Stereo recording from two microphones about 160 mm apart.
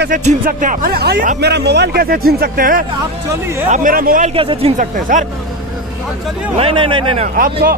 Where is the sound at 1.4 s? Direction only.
90° right; by 4.3 s 60° right (ahead or behind).